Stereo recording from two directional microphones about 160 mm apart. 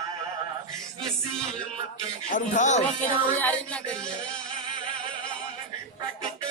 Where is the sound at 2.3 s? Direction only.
50° left (ahead or behind).